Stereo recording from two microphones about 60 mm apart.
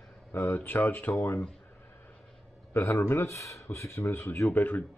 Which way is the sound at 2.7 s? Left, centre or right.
Left.